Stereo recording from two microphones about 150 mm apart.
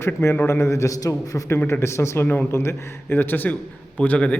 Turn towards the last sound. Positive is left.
turn(degrees=10)  # may be behind; listen again after turning